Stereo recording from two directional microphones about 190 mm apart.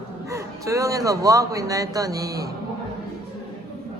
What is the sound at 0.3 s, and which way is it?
Speech, 15° right (ahead or behind).